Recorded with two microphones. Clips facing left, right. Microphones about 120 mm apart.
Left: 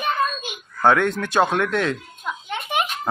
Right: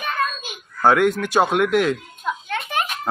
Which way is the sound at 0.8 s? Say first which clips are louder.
Right 2 dB; 5° right (ahead or behind).